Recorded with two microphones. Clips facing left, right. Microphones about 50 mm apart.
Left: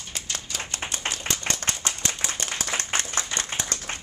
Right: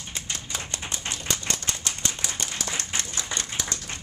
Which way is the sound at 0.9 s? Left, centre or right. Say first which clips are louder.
Left 1 dB; left.